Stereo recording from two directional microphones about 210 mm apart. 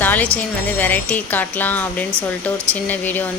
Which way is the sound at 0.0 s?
10° left (ahead or behind).